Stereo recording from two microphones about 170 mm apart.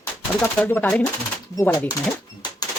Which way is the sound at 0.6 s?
10° left (ahead or behind).